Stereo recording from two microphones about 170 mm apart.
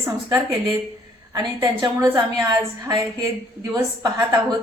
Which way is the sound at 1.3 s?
25° right (ahead or behind).